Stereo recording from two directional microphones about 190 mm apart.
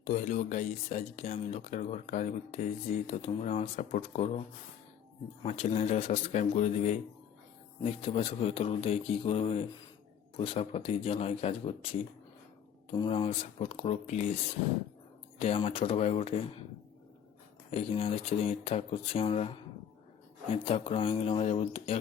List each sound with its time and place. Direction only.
0.0 s speech: 40° left (ahead or behind)
5.4 s speech: 35° left (ahead or behind)
15.4 s speech: 30° left (ahead or behind)
17.7 s speech: 30° left (ahead or behind)